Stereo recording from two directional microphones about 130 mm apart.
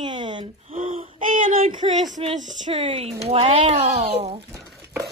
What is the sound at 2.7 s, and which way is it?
Speech, 45° right (ahead or behind).